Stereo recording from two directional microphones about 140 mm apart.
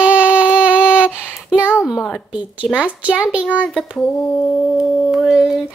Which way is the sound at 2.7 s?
10° right (ahead or behind).